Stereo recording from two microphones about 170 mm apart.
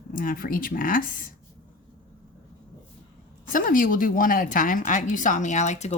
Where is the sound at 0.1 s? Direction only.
55° left (ahead or behind).